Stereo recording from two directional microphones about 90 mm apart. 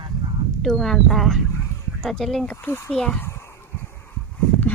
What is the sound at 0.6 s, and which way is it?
Speech, 5° left (ahead or behind).